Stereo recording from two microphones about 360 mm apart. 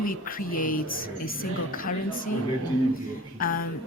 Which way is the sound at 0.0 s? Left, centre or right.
Left.